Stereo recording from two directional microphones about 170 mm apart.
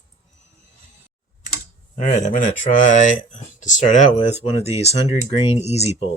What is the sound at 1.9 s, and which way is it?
Speech, 45° left (ahead or behind).